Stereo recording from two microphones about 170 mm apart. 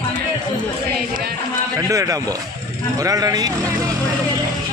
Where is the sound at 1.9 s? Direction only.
20° right (ahead or behind).